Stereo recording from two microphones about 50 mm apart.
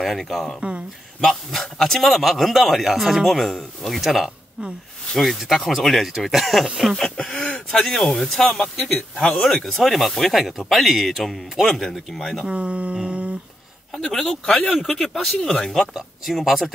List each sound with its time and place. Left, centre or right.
0.0 s a man's voice: centre
0.6 s a sound: right
1.2 s a man's voice: centre
7.0 s throat clearing: centre
7.4 s a sound: left
7.8 s a man's voice: centre
12.4 s a sound: right
13.9 s speech: centre
14.4 s speech: left
14.7 s speech: centre
15.9 s a man's voice: centre